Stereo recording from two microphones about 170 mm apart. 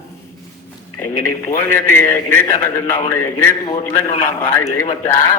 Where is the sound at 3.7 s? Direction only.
45° left (ahead or behind).